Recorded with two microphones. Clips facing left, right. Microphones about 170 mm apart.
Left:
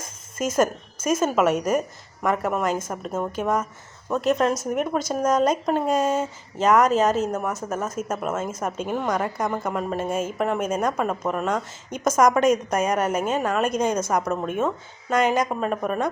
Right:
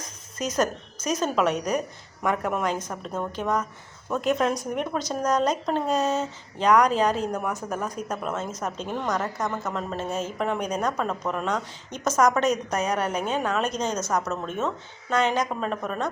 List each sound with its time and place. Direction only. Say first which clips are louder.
0.0 s a sound: left 4 dB; 50° left (ahead or behind)
1.1 s speech: left 3 dB; 5° left (ahead or behind)
1.5 s a woman's voice: left 4 dB; 50° left (ahead or behind)
2.2 s speech: left 2 dB; centre (ahead or behind)